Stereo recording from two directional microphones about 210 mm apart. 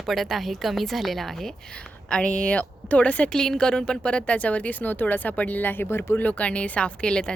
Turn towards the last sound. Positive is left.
turn(degrees=5)  # may be behind; listen again after turning